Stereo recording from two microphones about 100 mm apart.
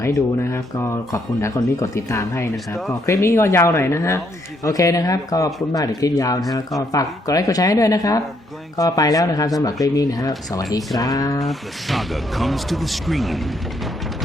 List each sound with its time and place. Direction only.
0.0 s speech: 30° left (ahead or behind)
11.4 s speech: centre (ahead or behind)